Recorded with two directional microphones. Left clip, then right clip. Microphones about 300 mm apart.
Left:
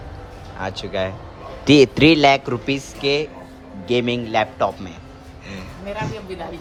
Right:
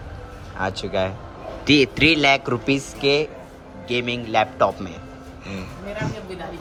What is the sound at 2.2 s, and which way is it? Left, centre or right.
A man's voice, centre.